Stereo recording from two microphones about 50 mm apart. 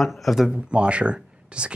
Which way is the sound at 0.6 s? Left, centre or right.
Right.